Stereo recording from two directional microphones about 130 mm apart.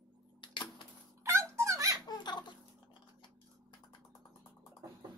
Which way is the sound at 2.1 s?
35° left (ahead or behind).